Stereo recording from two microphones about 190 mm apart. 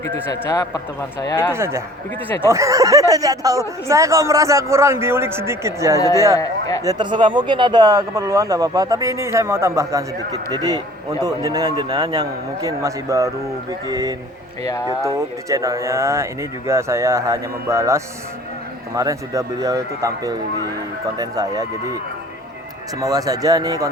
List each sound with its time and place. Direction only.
0.0 s speech: 15° left (ahead or behind)
1.5 s speech: 15° right (ahead or behind)
6.0 s speech: 15° left (ahead or behind)
6.8 s a man's voice: 25° right (ahead or behind)
14.6 s speech: 15° left (ahead or behind)
14.8 s speech: 15° right (ahead or behind)
23.0 s a man's voice: 20° right (ahead or behind)